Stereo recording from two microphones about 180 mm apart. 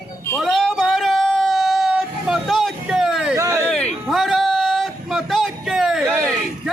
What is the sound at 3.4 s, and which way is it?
Speech, 15° right (ahead or behind).